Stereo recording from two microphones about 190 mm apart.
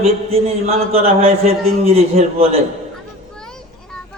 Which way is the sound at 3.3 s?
5° left (ahead or behind).